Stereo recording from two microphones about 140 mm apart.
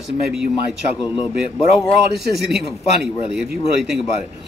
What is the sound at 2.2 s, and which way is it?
Speech, centre (ahead or behind).